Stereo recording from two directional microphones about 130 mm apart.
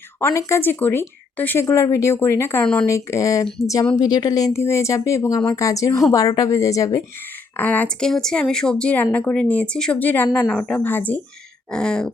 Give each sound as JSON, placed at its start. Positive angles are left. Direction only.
{"t": 0.2, "sound": "speech", "side_deg": 20}
{"t": 7.5, "sound": "speech", "side_deg": 15}
{"t": 11.7, "sound": "a sound", "side_deg": 5}